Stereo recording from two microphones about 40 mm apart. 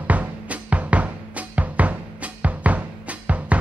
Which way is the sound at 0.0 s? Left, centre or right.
Right.